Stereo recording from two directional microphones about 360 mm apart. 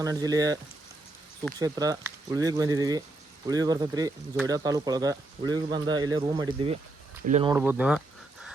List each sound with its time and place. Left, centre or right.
0.0 s speech: centre
7.5 s speech: centre